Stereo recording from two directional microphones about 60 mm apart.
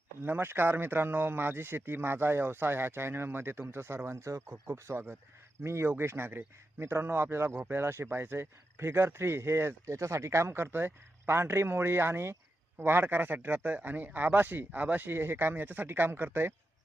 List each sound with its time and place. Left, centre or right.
0.2 s speech: right